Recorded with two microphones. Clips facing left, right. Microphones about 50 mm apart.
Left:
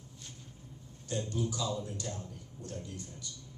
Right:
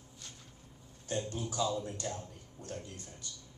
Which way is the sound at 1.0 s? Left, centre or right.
Right.